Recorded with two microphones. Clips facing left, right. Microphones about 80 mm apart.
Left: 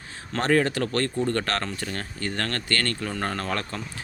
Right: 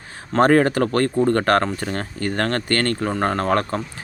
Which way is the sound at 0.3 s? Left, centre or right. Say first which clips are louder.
Right 7 dB; right.